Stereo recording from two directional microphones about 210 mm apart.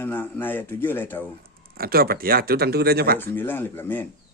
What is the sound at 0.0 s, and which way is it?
Speech, 10° left (ahead or behind).